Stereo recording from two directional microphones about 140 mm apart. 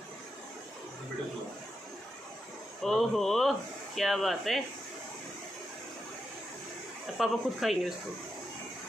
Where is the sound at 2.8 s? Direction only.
Centre (ahead or behind).